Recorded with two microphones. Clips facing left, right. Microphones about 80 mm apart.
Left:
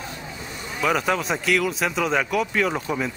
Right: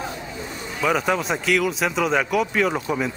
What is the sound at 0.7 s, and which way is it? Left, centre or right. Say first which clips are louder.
Speech: right 1 dB; centre.